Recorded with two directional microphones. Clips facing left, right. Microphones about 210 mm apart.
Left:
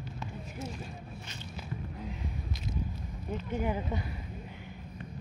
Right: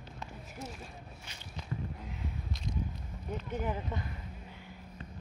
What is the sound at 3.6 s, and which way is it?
Speech, 10° left (ahead or behind).